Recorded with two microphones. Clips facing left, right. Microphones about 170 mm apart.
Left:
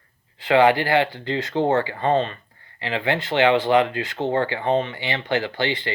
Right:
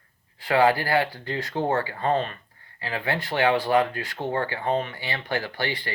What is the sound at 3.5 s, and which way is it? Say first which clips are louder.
Speech: left 4 dB; 20° left (ahead or behind).